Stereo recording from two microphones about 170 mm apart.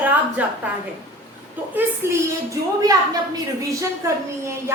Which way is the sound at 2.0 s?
15° right (ahead or behind).